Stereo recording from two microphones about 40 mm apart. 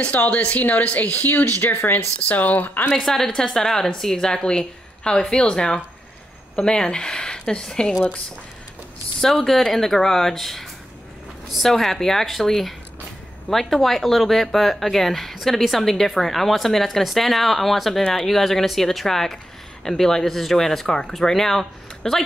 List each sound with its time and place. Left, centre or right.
0.0 s a woman's voice: left
2.9 s speech: centre
9.2 s speech: centre